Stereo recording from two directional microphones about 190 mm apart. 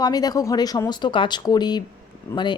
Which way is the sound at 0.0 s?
20° left (ahead or behind).